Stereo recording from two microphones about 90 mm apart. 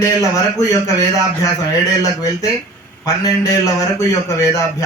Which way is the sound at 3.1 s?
40° left (ahead or behind).